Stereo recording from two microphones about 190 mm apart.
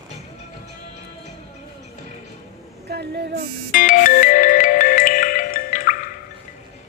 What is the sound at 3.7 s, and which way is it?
Music, 45° left (ahead or behind).